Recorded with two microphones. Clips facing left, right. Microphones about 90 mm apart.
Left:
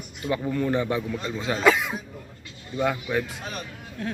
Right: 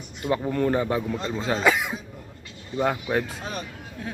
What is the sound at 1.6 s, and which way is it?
Cough, 10° right (ahead or behind).